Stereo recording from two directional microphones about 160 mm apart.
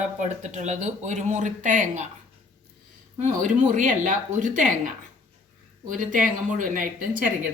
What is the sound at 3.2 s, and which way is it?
A woman's voice, 55° right (ahead or behind).